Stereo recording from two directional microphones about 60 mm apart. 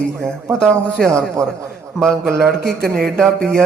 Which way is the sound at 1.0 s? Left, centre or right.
Right.